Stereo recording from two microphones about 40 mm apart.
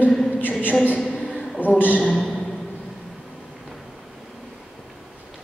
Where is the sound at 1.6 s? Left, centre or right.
Left.